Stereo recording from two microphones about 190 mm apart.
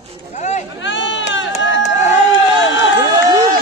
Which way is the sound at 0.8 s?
75° left (ahead or behind).